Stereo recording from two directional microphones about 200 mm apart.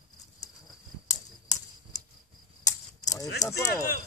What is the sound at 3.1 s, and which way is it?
Speech, 15° left (ahead or behind).